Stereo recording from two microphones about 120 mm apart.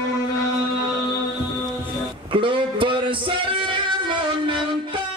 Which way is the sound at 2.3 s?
45° right (ahead or behind).